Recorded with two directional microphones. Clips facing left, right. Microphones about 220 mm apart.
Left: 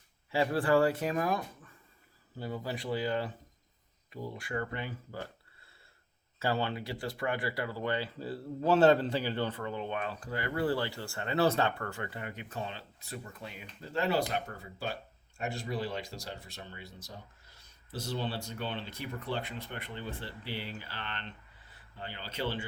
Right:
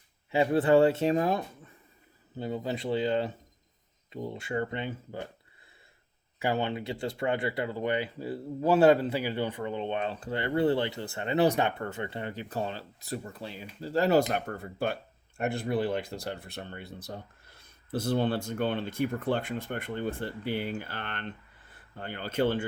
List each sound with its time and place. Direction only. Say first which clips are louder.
0.3 s speech: right 5 dB; 20° right (ahead or behind)
6.4 s speech: right 3 dB; 20° right (ahead or behind); by 14.3 s 40° right (ahead or behind)
14.3 s speech: right 5 dB; 55° right (ahead or behind)